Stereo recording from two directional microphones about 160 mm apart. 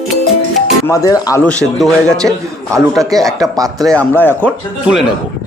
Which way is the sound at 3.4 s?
20° right (ahead or behind).